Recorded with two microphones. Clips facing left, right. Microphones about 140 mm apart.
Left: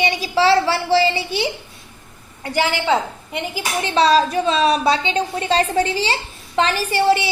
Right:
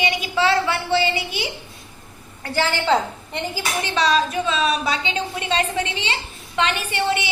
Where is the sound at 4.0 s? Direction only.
35° left (ahead or behind).